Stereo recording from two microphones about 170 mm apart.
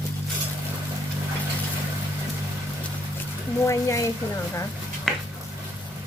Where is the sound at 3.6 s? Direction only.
20° left (ahead or behind).